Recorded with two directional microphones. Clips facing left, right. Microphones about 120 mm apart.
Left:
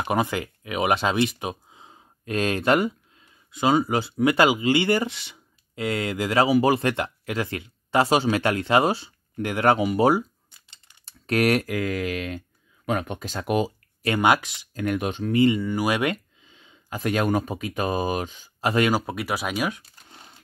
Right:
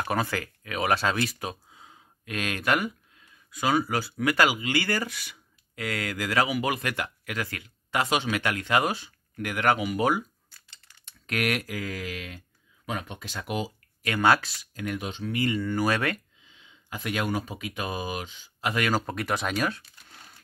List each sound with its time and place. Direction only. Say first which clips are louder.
0.0 s speech: left 4 dB; 20° left (ahead or behind)
11.1 s typing: left 7 dB; 35° left (ahead or behind)
11.6 s speech: left 8 dB; 55° left (ahead or behind)
14.2 s speech: left 1 dB; 15° left (ahead or behind)
14.7 s speech: left 7 dB; 50° left (ahead or behind)
15.5 s speech: left 2 dB; 10° left (ahead or behind)
16.4 s speech: left 9 dB; 45° left (ahead or behind)
18.9 s speech: left 3 dB; 10° left (ahead or behind)
20.1 s a sound: left 3 dB; 25° left (ahead or behind)